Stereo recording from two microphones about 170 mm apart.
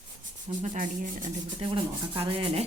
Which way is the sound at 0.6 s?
45° right (ahead or behind).